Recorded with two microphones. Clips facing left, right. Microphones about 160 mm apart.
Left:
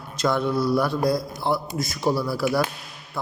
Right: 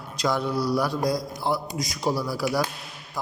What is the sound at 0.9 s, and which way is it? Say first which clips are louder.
Speech: left 3 dB; 60° left (ahead or behind).